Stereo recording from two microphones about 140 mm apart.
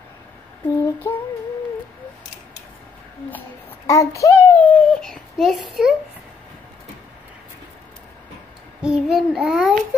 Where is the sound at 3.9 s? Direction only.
25° left (ahead or behind).